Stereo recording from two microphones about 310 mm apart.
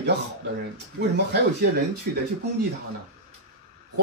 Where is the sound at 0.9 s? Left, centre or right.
Right.